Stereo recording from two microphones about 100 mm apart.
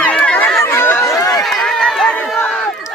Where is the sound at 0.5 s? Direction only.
25° left (ahead or behind).